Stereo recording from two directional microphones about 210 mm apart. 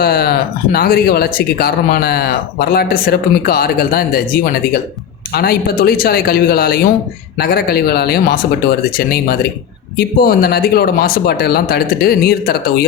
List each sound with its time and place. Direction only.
0.0 s speech: 50° left (ahead or behind)